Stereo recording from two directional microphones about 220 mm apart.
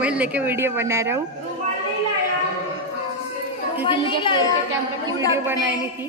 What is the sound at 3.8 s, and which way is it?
Chatter, 20° left (ahead or behind).